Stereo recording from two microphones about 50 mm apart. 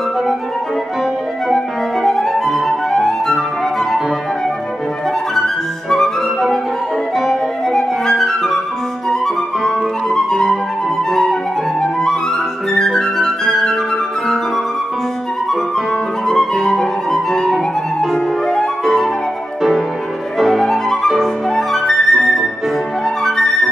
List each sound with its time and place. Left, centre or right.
2.0 s flute: centre
5.3 s music: centre
7.7 s flute: centre
10.0 s music: centre
12.7 s flute: centre
16.3 s music: centre
20.3 s music: centre
21.2 s flute: centre